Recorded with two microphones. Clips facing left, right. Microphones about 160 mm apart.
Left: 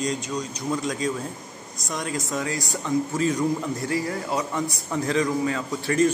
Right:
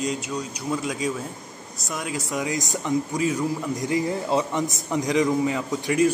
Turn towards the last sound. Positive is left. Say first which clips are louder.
# right 1 dB
turn(degrees=-15)  # may be behind; listen again after turning